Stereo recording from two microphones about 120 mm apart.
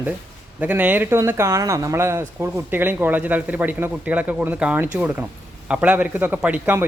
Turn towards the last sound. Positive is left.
turn(degrees=-15)  # may be behind; listen again after turning